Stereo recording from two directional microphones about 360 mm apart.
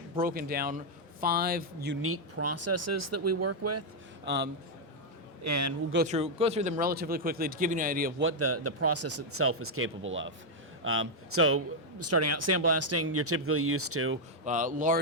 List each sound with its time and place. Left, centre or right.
0.2 s speech: right
5.4 s a man's voice: right
5.9 s speech: right
8.3 s speech: right
14.4 s speech: right